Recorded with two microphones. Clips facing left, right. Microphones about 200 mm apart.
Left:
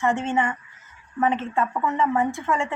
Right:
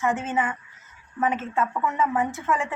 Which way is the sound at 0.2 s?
5° right (ahead or behind).